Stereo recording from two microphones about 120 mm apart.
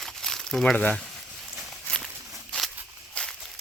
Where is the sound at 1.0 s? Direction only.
Centre (ahead or behind).